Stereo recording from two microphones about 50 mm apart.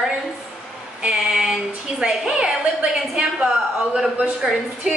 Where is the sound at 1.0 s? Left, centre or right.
Centre.